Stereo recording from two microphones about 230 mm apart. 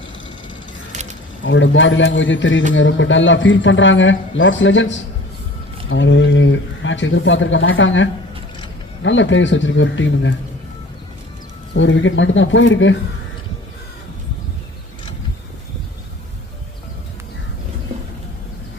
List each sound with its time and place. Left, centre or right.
0.9 s a sound: right
1.5 s speech: left
11.8 s speech: left